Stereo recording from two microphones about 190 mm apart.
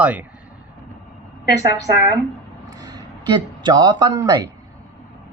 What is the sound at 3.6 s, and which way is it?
Speech, 25° right (ahead or behind).